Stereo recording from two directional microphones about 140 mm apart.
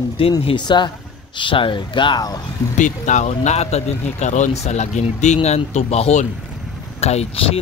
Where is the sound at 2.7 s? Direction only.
60° left (ahead or behind).